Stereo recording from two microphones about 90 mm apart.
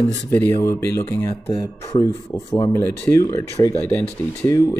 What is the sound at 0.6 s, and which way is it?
Speech, 35° left (ahead or behind).